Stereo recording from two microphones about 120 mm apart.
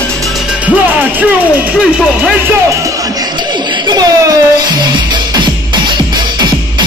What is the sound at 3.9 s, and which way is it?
Speech, 35° right (ahead or behind).